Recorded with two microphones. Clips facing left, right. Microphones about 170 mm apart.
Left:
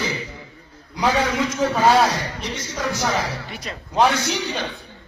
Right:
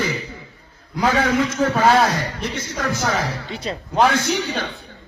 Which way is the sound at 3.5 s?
30° right (ahead or behind).